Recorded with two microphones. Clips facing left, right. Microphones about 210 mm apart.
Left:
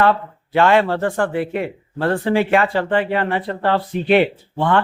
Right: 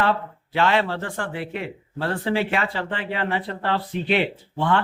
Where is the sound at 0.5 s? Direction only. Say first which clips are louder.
Left 6 dB; 50° left (ahead or behind).